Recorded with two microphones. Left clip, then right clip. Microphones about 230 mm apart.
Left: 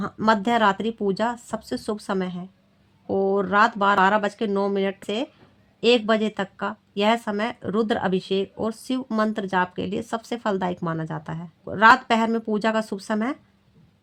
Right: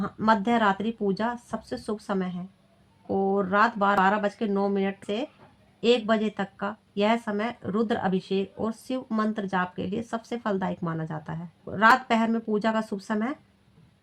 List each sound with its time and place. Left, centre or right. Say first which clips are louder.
0.0 s speech: left 2 dB; left